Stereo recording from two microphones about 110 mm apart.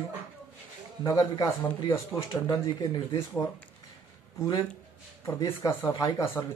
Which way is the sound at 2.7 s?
40° left (ahead or behind).